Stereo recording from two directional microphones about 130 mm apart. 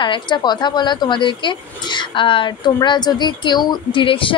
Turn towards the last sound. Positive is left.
turn(degrees=40)  # may be behind; listen again after turning